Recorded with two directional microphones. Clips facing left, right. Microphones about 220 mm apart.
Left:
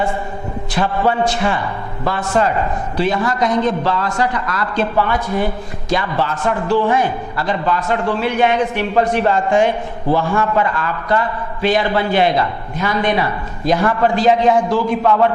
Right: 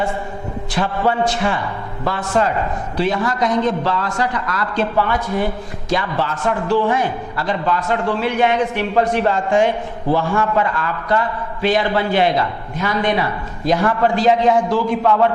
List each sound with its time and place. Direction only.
0.9 s a man's voice: 15° left (ahead or behind)